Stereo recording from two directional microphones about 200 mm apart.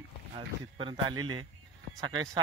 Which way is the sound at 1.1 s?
90° right.